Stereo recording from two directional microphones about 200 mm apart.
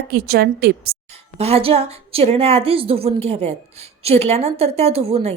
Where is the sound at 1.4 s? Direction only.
30° right (ahead or behind).